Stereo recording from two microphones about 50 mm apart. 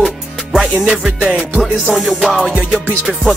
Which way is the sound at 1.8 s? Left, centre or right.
Centre.